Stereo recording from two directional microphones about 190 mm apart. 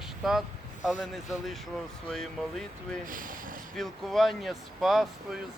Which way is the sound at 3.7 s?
Centre (ahead or behind).